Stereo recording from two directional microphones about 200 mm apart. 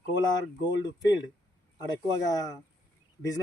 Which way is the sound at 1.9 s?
20° left (ahead or behind).